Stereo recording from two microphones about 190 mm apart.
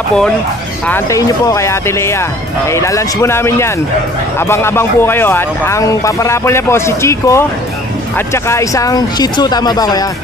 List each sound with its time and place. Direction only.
0.8 s speech: 15° left (ahead or behind)
8.5 s speech: 15° left (ahead or behind)